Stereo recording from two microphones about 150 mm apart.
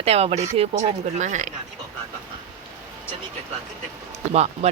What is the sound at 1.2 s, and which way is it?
Speech, 55° right (ahead or behind).